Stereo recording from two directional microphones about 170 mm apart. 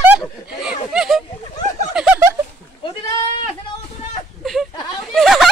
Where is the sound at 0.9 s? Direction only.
Centre (ahead or behind).